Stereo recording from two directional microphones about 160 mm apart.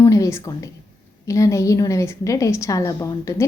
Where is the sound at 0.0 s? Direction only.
20° left (ahead or behind).